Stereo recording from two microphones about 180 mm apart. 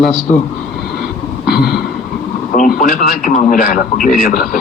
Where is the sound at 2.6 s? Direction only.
50° left (ahead or behind).